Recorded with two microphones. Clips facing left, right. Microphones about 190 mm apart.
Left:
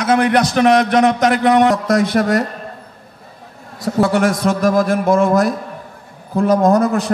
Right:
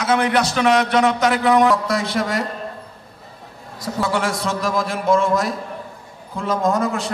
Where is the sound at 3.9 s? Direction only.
60° left (ahead or behind).